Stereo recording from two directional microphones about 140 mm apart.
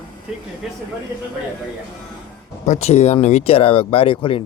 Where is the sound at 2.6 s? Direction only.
55° left (ahead or behind).